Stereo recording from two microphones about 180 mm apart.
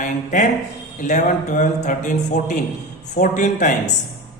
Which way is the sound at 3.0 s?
40° left (ahead or behind).